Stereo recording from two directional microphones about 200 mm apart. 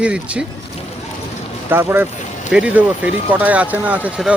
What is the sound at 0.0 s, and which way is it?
Speech, 5° right (ahead or behind).